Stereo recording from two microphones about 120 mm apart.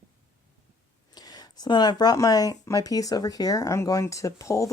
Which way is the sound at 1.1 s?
35° left (ahead or behind).